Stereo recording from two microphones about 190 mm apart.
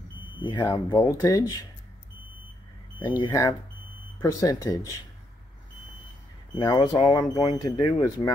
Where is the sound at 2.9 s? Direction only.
25° left (ahead or behind).